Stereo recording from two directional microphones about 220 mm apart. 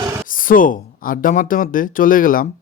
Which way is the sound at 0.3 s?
40° left (ahead or behind).